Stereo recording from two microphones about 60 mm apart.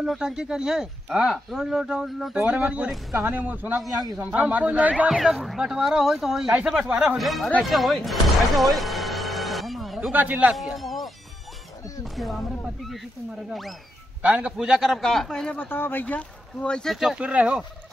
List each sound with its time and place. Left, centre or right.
0.0 s speech: centre
2.3 s speech: centre
5.1 s speech: centre
7.7 s music: centre
10.1 s speech: right
10.5 s speech: centre
13.5 s speech: centre
14.2 s speech: right
14.6 s speech: centre
15.0 s speech: centre
15.6 s speech: left
16.2 s speech: centre
17.1 s speech: centre